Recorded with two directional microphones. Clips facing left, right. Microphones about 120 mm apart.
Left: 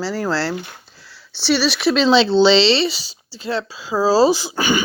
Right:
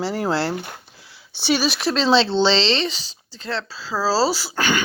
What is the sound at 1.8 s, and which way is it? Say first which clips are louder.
Speech: left 5 dB; 5° left (ahead or behind).